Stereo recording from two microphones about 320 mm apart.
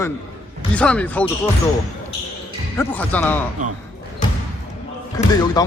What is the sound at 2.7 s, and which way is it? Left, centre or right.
Speech, centre.